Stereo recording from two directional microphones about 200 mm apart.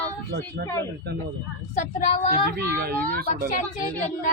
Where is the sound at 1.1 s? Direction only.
55° right (ahead or behind).